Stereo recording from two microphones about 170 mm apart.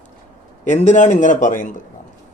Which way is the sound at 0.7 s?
45° left (ahead or behind).